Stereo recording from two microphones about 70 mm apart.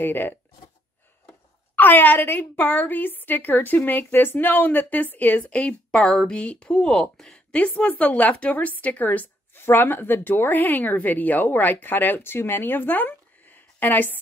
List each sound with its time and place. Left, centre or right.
0.0 s a woman's voice: left
1.8 s a woman's voice: left; by 7.3 s centre
7.3 s a woman's voice: centre